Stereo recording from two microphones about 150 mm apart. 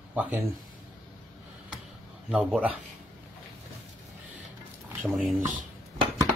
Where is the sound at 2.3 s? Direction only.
10° right (ahead or behind).